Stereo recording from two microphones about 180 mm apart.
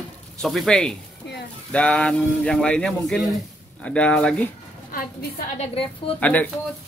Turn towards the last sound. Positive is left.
turn(degrees=10)  # may be behind; listen again after turning